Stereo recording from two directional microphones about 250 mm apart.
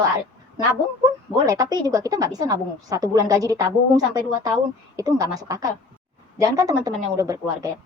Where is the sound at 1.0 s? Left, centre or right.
Centre.